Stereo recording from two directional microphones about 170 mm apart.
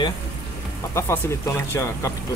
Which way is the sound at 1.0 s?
15° left (ahead or behind).